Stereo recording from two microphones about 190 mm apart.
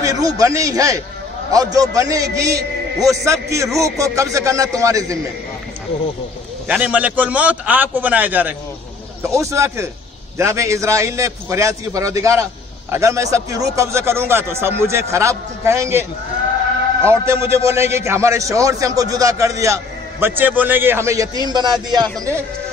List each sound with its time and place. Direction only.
0.0 s a man's voice: 20° right (ahead or behind)
6.7 s a man's voice: 5° right (ahead or behind)
17.3 s a man's voice: 15° right (ahead or behind)